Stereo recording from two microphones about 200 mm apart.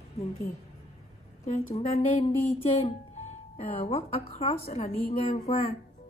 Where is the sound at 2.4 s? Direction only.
30° left (ahead or behind).